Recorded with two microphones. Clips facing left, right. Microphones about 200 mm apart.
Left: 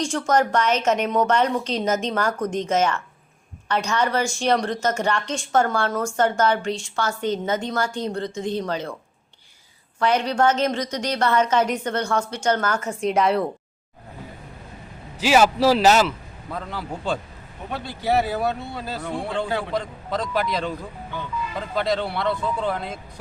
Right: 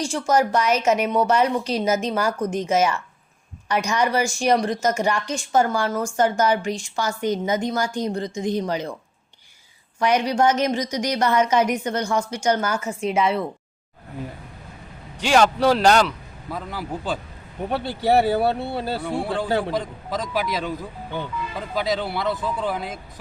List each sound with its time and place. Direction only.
0.1 s a woman's voice: 10° right (ahead or behind)
10.0 s a woman's voice: 15° right (ahead or behind)
15.2 s a man's voice: 5° left (ahead or behind)
17.7 s speech: 35° right (ahead or behind)
19.0 s a man's voice: 5° right (ahead or behind)
21.8 s a man's voice: 5° right (ahead or behind)